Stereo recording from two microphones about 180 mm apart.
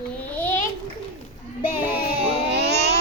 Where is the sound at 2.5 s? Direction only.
70° right (ahead or behind).